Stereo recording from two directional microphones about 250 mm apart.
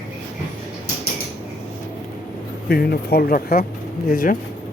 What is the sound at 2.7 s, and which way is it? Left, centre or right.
Speech, left.